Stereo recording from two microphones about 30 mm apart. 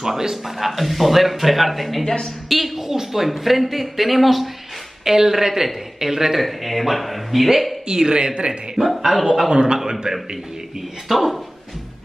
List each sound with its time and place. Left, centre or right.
0.0 s a sound: centre
0.6 s speech: centre
5.0 s a woman's voice: centre
6.4 s speech: centre
7.9 s speech: right
8.8 s speech: centre
9.5 s speech: right
11.1 s speech: centre